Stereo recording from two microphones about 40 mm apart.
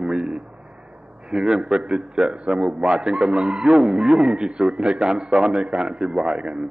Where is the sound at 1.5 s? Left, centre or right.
Centre.